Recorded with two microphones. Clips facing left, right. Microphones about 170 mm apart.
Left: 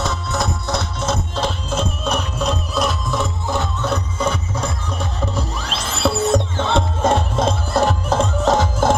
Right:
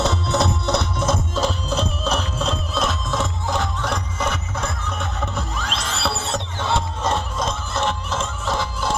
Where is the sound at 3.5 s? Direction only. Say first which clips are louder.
Left 3 dB; 25° left (ahead or behind).